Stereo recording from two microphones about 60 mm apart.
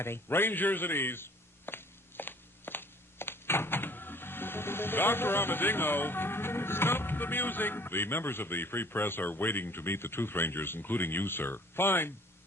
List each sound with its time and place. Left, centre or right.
0.0 s speech: left